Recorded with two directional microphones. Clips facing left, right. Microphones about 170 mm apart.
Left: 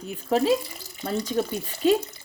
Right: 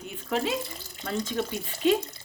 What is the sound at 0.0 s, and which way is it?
Speech, 35° left (ahead or behind).